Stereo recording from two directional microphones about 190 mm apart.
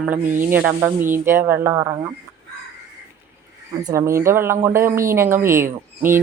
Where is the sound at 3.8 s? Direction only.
15° right (ahead or behind).